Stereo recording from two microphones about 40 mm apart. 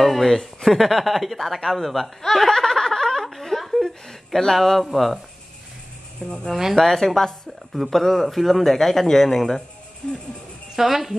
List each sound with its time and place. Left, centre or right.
0.0 s a man's voice: centre
10.0 s speech: centre
10.8 s speech: centre